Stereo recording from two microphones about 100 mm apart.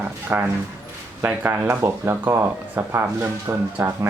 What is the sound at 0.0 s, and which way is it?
Speech, 20° right (ahead or behind).